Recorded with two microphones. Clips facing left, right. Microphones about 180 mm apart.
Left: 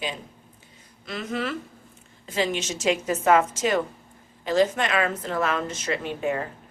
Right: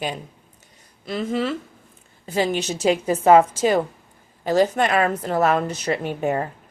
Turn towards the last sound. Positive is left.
turn(degrees=-40)  # may be behind; listen again after turning